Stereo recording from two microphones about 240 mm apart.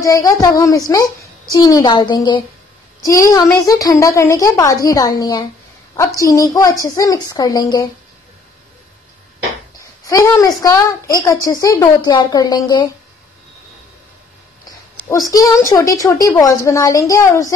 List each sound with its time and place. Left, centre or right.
0.0 s a woman's voice: centre
10.0 s a woman's voice: centre
15.0 s a woman's voice: centre